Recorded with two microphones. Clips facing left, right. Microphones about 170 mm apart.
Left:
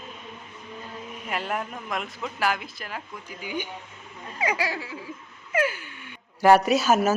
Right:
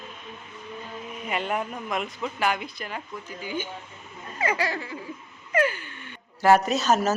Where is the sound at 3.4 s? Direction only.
15° left (ahead or behind).